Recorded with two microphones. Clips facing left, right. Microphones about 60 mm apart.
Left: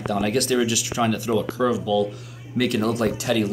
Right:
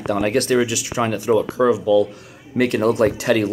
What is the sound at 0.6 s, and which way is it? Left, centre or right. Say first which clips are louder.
Speech: right 2 dB; right.